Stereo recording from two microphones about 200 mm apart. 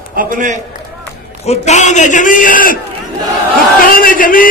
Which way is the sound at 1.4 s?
35° left (ahead or behind).